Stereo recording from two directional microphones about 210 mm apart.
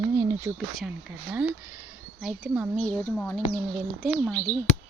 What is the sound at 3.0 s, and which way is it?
Speech, 10° left (ahead or behind).